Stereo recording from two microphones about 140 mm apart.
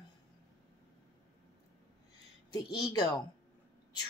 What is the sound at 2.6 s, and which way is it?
Speech, 30° left (ahead or behind).